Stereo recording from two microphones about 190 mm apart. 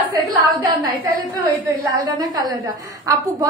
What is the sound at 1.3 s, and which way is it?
A woman's voice, 20° right (ahead or behind).